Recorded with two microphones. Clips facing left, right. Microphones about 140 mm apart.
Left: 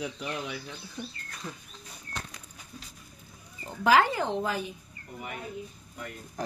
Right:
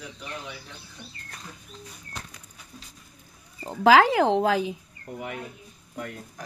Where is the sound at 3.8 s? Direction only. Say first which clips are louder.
Right 6 dB; 90° right.